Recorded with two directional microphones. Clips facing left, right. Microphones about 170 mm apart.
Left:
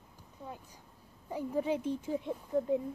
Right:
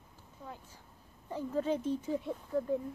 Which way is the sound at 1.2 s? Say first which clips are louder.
Even; 10° left (ahead or behind).